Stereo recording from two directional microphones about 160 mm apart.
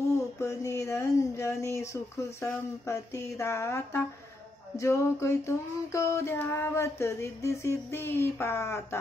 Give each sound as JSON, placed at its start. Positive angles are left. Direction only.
{"t": 0.4, "sound": "female singing", "side_deg": 20}